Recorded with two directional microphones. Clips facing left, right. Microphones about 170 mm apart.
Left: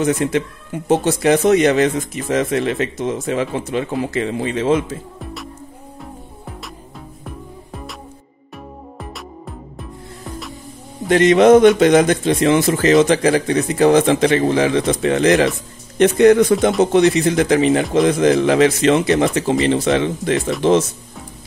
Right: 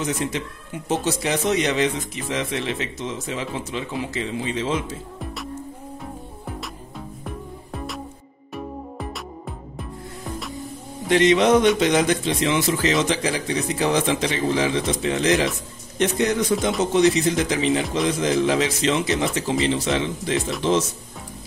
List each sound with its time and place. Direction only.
0.0 s speech: 55° left (ahead or behind)
5.2 s music: centre (ahead or behind)
7.2 s music: centre (ahead or behind)
11.1 s speech: 50° left (ahead or behind)